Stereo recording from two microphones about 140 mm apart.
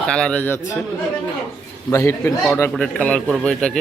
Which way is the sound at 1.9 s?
20° left (ahead or behind).